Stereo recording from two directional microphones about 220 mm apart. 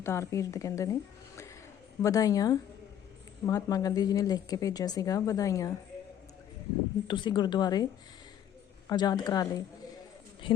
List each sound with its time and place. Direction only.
0.0 s a woman's voice: 15° left (ahead or behind)
2.0 s a woman's voice: 15° left (ahead or behind)
7.1 s a woman's voice: 20° left (ahead or behind)
8.9 s a woman's voice: 20° left (ahead or behind)